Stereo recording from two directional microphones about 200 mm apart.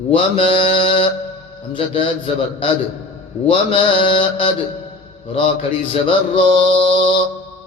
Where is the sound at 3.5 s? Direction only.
25° left (ahead or behind).